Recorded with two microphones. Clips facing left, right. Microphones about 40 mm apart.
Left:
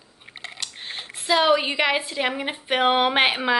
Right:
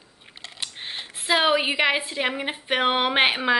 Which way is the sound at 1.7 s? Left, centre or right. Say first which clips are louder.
Even; centre.